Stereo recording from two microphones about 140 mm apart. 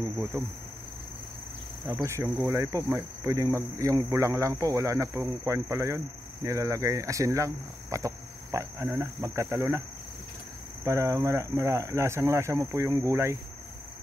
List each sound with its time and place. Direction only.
0.3 s speech: 15° right (ahead or behind)
2.0 s speech: 20° right (ahead or behind)
10.8 s speech: 20° right (ahead or behind)